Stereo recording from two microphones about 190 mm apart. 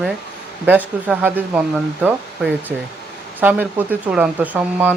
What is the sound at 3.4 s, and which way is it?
Speech, 10° right (ahead or behind).